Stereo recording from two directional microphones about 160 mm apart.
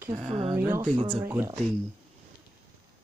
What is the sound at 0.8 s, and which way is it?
Speech, 30° right (ahead or behind).